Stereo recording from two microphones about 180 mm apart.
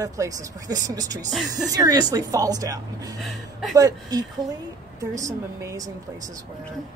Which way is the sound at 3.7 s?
20° right (ahead or behind).